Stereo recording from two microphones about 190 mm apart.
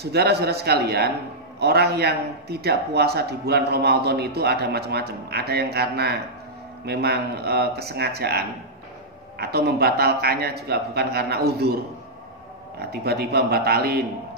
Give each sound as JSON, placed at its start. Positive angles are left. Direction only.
{"t": 0.0, "sound": "a man's voice", "side_deg": -60}